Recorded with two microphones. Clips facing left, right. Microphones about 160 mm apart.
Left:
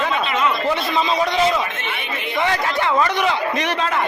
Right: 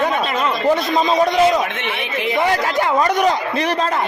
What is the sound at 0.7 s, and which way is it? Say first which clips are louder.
Speech: right 4 dB; 45° right (ahead or behind).